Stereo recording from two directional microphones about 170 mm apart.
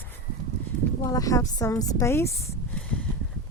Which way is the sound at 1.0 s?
20° left (ahead or behind).